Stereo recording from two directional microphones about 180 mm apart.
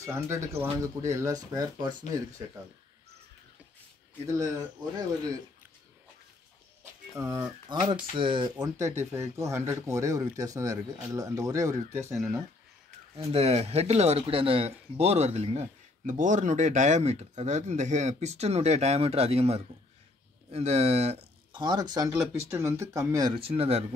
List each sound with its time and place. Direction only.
0.0 s speech: 15° right (ahead or behind)
7.2 s speech: 20° right (ahead or behind)
8.7 s speech: 15° right (ahead or behind)
13.1 s speech: 35° right (ahead or behind)